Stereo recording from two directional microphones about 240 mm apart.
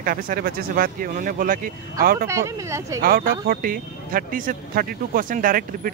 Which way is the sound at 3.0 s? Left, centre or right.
Right.